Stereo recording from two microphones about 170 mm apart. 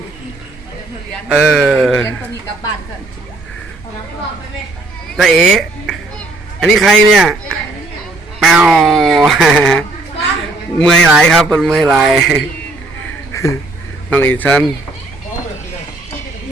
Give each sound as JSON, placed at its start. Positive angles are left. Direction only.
{"t": 1.3, "sound": "speech", "side_deg": -5}
{"t": 5.1, "sound": "speech", "side_deg": 0}
{"t": 13.3, "sound": "a sound", "side_deg": 20}
{"t": 14.1, "sound": "speech", "side_deg": 10}